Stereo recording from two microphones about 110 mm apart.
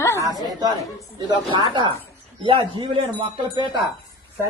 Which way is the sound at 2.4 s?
50° right (ahead or behind).